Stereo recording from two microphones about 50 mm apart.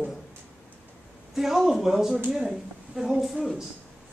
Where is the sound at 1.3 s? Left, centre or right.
Centre.